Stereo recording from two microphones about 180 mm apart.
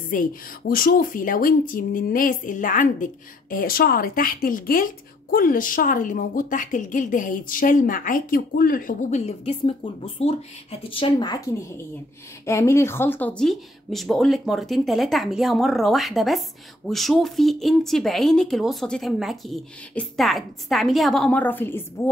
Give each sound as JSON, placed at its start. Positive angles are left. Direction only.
{"t": 0.1, "sound": "speech", "side_deg": 50}